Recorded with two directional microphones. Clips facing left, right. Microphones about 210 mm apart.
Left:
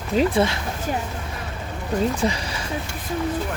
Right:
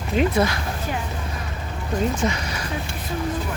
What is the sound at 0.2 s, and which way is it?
Speech, 30° left (ahead or behind).